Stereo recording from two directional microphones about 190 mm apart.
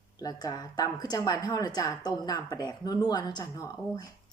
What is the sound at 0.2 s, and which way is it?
A woman's voice, 20° left (ahead or behind).